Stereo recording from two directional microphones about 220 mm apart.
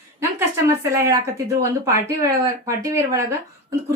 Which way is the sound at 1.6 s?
15° right (ahead or behind).